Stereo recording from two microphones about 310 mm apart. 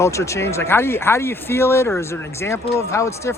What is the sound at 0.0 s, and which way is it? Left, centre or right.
Speech, centre.